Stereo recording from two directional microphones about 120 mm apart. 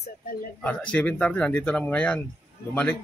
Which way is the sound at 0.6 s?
10° left (ahead or behind).